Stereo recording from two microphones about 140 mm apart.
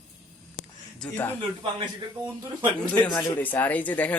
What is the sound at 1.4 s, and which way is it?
Speech, 35° right (ahead or behind).